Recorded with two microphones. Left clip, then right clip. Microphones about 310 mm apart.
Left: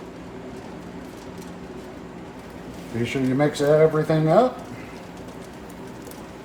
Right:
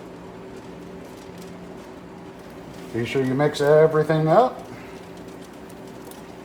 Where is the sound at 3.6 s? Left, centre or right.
Centre.